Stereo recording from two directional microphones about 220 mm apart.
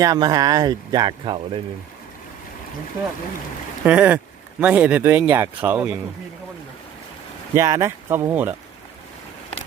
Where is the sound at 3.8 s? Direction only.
5° right (ahead or behind).